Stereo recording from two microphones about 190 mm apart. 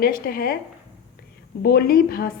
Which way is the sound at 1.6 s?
55° left (ahead or behind).